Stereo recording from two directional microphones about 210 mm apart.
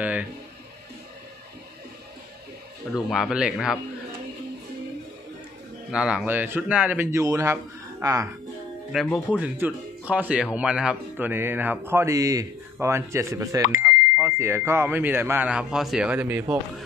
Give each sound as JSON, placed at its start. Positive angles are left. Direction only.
{"t": 0.0, "sound": "music", "side_deg": -5}
{"t": 3.1, "sound": "speech", "side_deg": 0}
{"t": 5.9, "sound": "speech", "side_deg": -5}
{"t": 8.9, "sound": "speech", "side_deg": 0}